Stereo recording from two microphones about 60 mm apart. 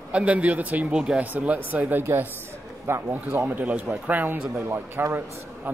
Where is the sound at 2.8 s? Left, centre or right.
Right.